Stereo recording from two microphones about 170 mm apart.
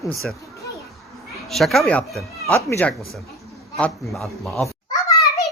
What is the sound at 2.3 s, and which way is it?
Cat, 20° right (ahead or behind).